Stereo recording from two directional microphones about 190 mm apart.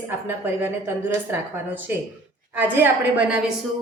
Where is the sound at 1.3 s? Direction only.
10° right (ahead or behind).